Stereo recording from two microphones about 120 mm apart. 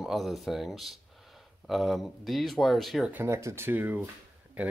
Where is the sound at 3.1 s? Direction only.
20° right (ahead or behind).